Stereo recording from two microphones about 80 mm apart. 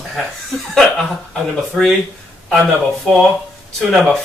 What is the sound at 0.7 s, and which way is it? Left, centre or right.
Speech, centre.